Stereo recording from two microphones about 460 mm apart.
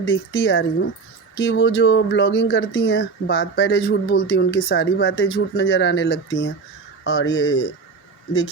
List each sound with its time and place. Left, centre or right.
0.1 s speech: left